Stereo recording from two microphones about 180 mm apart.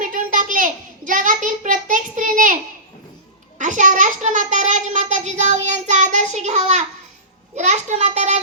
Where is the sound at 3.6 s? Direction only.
45° right (ahead or behind).